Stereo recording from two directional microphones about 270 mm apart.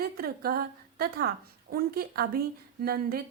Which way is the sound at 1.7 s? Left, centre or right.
Right.